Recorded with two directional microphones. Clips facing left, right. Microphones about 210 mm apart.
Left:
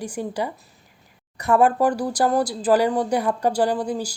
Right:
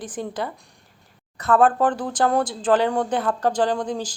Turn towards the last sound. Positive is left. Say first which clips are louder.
# left 1 dB
turn(degrees=10)  # may be behind; listen again after turning